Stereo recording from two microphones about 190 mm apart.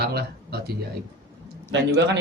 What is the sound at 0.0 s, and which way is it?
Speech, 55° right (ahead or behind).